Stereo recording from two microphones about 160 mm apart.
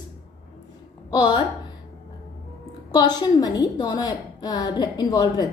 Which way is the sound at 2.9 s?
25° left (ahead or behind).